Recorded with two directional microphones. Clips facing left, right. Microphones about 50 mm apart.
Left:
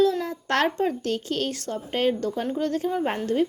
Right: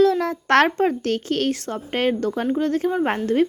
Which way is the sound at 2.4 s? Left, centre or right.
Right.